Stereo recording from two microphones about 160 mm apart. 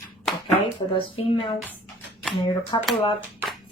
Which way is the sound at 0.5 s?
35° left (ahead or behind).